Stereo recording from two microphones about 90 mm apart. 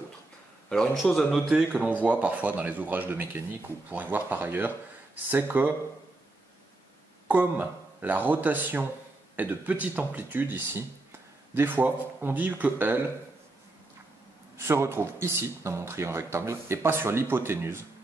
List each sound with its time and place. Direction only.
0.7 s a man's voice: 5° left (ahead or behind)
1.3 s speech: 5° right (ahead or behind); by 5.8 s 20° right (ahead or behind)
7.2 s speech: 15° right (ahead or behind)
14.6 s speech: 30° right (ahead or behind)